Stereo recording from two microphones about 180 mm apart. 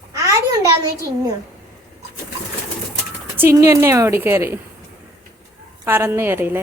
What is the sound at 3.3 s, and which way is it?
A woman's voice, 15° right (ahead or behind).